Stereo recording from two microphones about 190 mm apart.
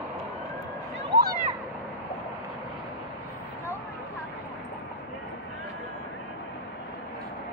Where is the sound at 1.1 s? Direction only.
65° right (ahead or behind).